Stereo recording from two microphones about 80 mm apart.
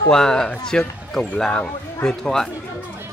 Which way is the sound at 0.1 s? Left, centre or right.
Centre.